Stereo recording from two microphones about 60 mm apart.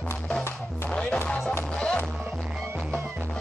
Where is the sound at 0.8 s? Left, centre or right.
Centre.